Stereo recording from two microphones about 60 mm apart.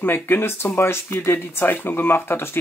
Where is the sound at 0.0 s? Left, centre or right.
Left.